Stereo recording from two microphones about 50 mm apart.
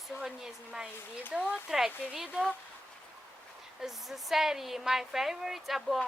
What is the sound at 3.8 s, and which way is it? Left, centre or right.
A woman's voice, centre.